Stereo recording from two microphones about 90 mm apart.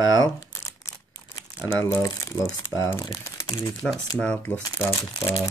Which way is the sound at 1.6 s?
40° left (ahead or behind).